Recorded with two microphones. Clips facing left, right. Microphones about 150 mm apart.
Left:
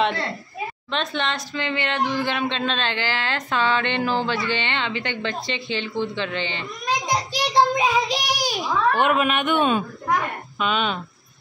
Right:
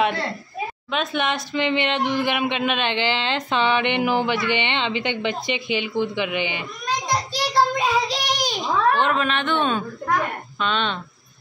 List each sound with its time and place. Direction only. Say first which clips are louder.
0.9 s speech: right 2 dB; 10° right (ahead or behind)
7.1 s a child's voice: even; 15° left (ahead or behind)